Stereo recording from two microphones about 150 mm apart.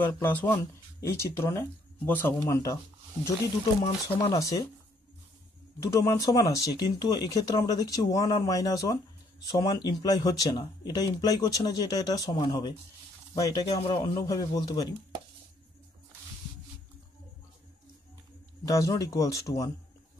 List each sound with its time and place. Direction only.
0.0 s speech: 15° left (ahead or behind)
4.3 s speech: 20° left (ahead or behind)
5.8 s speech: 20° left (ahead or behind)
18.7 s speech: 20° left (ahead or behind)